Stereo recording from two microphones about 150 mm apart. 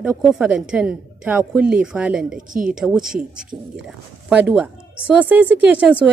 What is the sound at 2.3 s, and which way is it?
Speech, 65° right (ahead or behind).